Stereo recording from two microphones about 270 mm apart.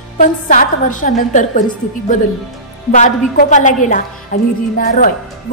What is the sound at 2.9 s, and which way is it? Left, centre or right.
A woman's voice, left.